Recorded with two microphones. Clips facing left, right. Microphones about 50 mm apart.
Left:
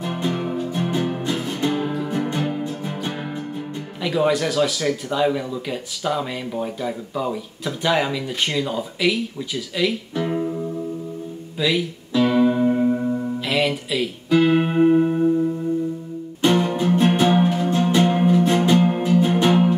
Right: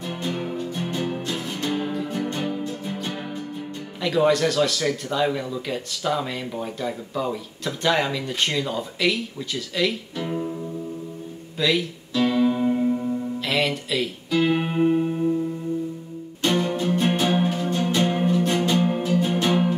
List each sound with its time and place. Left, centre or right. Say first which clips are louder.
0.0 s music: left 4 dB; centre
1.3 s music: left 4 dB; centre
2.1 s music: left 3 dB; left
4.0 s speech: even; centre
10.2 s music: left 4 dB; centre
11.5 s speech: left 1 dB; centre
12.1 s music: left 3 dB; centre
13.5 s speech: left 2 dB; centre
14.5 s music: left 5 dB; centre